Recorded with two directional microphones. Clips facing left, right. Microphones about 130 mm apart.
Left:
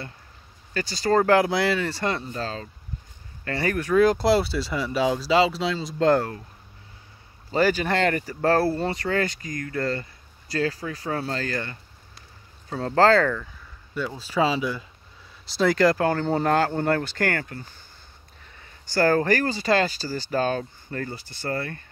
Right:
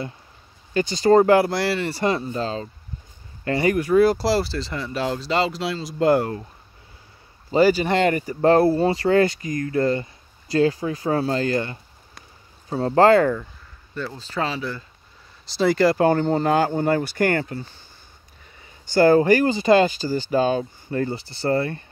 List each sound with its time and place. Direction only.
0.7 s speech: 20° right (ahead or behind)
1.3 s speech: centre (ahead or behind)
2.3 s speech: 25° right (ahead or behind)
3.6 s speech: 10° right (ahead or behind)
7.5 s speech: 10° right (ahead or behind)
12.8 s speech: 15° right (ahead or behind)
13.9 s speech: 5° left (ahead or behind)
15.4 s speech: centre (ahead or behind)
16.0 s speech: 15° right (ahead or behind)
16.3 s speech: 5° left (ahead or behind)
16.5 s speech: 10° right (ahead or behind)
18.9 s speech: 15° right (ahead or behind)
21.0 s speech: 25° right (ahead or behind)